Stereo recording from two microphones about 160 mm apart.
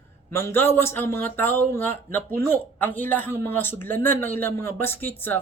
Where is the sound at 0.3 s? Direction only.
15° left (ahead or behind).